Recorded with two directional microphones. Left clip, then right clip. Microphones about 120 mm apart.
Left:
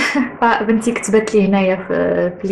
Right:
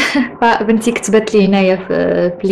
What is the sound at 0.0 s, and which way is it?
Speech, 30° right (ahead or behind).